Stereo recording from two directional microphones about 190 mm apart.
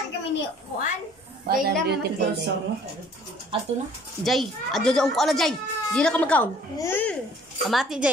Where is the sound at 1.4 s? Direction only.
55° right (ahead or behind).